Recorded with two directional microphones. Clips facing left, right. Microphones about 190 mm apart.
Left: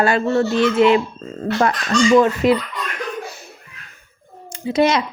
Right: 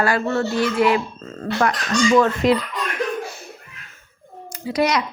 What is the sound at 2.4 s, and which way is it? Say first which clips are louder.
Speech: left 2 dB; centre (ahead or behind).